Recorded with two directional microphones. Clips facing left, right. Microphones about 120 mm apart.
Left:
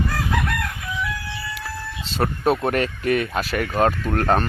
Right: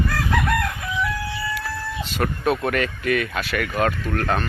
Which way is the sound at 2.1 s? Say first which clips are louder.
Left 2 dB; 30° left (ahead or behind).